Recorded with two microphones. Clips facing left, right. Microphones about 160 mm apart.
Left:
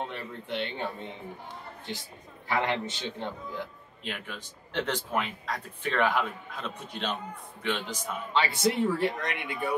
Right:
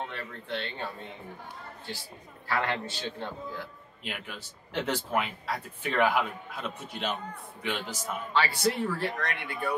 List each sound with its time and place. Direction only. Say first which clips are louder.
0.0 s speech: left 2 dB; 15° left (ahead or behind)
2.4 s speech: left 2 dB; 20° left (ahead or behind)
4.0 s speech: left 1 dB; 5° right (ahead or behind)
8.3 s speech: left 1 dB; 20° left (ahead or behind)